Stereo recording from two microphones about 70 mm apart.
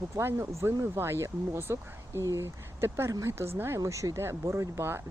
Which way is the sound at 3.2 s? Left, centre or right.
Right.